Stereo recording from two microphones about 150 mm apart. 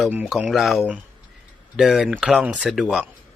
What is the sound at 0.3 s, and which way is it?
Speech, centre (ahead or behind).